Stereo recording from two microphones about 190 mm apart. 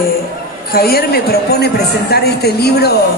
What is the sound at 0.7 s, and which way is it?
A man's voice, 55° left (ahead or behind).